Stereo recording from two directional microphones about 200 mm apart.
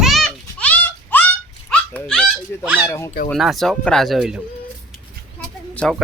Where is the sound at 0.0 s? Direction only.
Centre (ahead or behind).